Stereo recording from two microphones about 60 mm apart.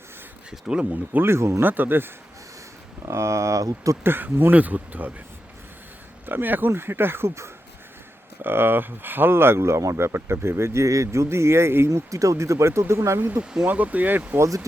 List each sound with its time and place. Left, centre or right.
0.7 s speech: centre
1.2 s speech: right
1.6 s speech: right
3.1 s speech: right
4.0 s speech: right
6.2 s speech: right
8.4 s speech: right
11.9 s speech: right
13.1 s speech: right
13.4 s speech: centre
13.7 s speech: right
14.3 s speech: right